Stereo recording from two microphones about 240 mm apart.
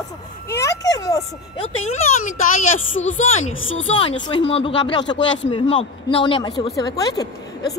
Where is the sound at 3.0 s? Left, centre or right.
Left.